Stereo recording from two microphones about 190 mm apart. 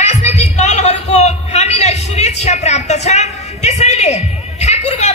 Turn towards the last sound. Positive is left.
turn(degrees=35)  # may be behind; listen again after turning